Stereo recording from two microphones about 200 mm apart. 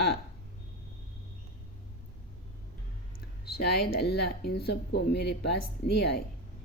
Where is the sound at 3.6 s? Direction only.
55° left (ahead or behind).